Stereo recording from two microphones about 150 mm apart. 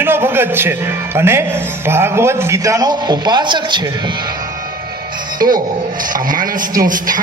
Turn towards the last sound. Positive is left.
turn(degrees=-65)  # may be behind; listen again after turning